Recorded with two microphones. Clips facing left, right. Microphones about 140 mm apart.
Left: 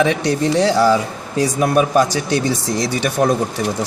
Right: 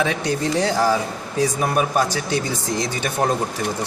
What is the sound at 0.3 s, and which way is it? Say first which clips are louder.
Speech: left 5 dB; 80° left.